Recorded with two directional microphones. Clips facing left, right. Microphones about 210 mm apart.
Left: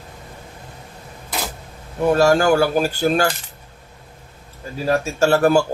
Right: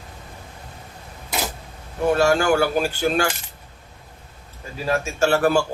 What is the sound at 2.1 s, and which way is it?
Speech, 40° left (ahead or behind).